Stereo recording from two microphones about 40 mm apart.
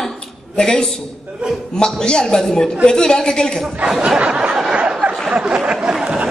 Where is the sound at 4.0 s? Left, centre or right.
Right.